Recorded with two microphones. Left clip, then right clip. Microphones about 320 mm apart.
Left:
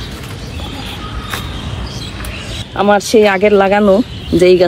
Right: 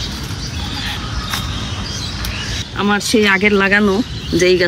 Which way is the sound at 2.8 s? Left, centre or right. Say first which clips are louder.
Left 6 dB; centre.